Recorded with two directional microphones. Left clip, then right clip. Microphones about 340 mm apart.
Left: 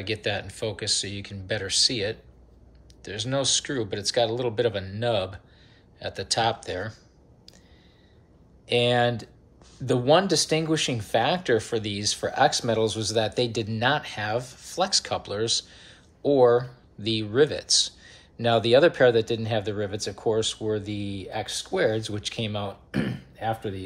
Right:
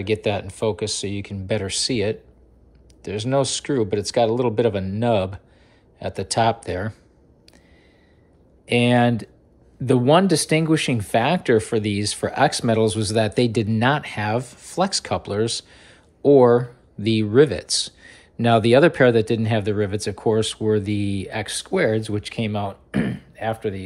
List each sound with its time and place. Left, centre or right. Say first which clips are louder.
0.0 s speech: right 6 dB; centre
8.6 s speech: right 3 dB; centre